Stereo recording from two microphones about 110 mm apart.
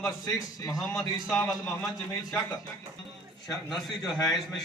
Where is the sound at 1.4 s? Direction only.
35° left (ahead or behind).